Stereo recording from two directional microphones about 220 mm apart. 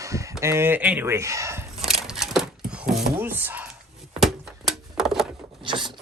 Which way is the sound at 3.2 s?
10° right (ahead or behind).